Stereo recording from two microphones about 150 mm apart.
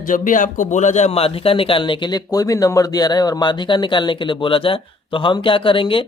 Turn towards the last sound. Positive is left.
turn(degrees=35)  # may be behind; listen again after turning